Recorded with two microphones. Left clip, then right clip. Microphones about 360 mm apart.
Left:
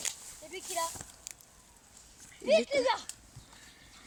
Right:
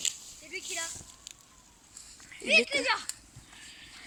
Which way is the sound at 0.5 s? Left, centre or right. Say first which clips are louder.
Left 1 dB; left.